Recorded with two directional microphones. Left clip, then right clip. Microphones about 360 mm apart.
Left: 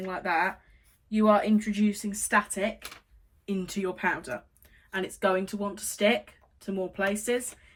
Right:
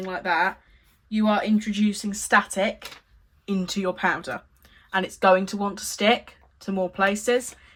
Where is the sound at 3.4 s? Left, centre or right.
Centre.